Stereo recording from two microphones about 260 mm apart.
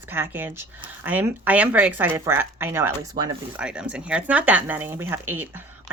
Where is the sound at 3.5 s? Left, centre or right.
Centre.